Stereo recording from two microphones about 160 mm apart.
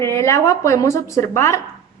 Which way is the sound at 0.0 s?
15° left (ahead or behind).